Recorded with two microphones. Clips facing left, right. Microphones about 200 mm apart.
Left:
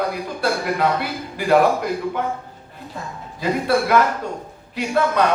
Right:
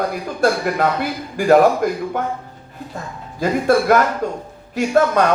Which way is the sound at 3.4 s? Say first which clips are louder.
Right 4 dB; 45° right (ahead or behind).